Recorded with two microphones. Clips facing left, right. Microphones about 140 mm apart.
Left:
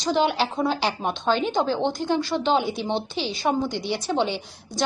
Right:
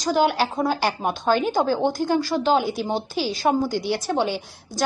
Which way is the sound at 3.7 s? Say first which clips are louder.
Right 3 dB; 50° right (ahead or behind).